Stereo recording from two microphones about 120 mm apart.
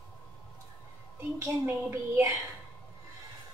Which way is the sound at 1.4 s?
20° right (ahead or behind).